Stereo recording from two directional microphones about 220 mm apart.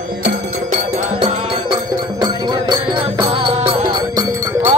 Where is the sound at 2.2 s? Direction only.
20° right (ahead or behind).